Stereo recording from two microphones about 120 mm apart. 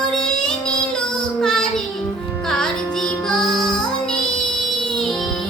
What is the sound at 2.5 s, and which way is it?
Music, 5° left (ahead or behind).